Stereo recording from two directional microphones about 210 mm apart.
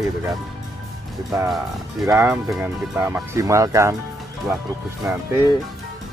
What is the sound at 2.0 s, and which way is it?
Speech, 15° right (ahead or behind).